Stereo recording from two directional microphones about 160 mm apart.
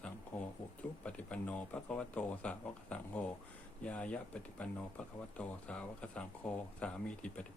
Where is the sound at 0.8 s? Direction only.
10° left (ahead or behind).